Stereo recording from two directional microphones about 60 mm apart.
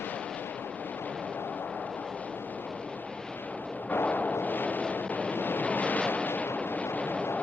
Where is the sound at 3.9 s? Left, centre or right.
Left.